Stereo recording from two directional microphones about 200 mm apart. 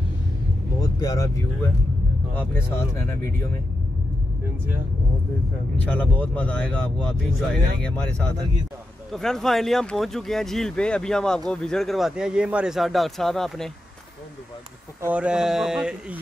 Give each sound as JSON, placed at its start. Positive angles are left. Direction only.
{"t": 0.7, "sound": "speech", "side_deg": 20}
{"t": 5.9, "sound": "speech", "side_deg": 5}
{"t": 15.0, "sound": "speech", "side_deg": -5}